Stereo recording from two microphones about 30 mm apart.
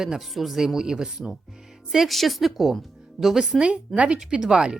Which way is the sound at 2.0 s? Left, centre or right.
Centre.